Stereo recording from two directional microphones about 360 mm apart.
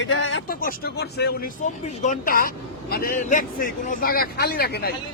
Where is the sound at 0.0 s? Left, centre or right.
Left.